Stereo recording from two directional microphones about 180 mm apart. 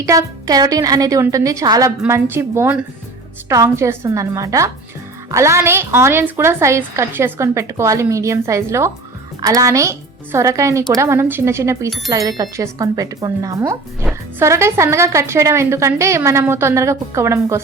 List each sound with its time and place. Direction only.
0.0 s a woman's voice: 15° right (ahead or behind)